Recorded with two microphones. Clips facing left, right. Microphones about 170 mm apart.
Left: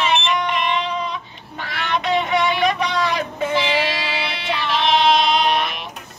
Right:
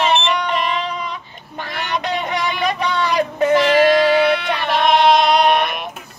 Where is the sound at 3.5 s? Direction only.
50° right (ahead or behind).